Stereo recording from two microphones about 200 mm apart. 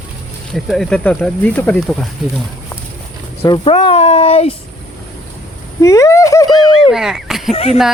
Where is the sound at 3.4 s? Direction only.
25° left (ahead or behind).